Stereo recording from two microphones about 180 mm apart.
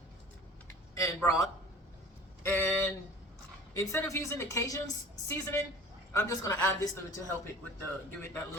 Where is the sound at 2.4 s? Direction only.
10° left (ahead or behind).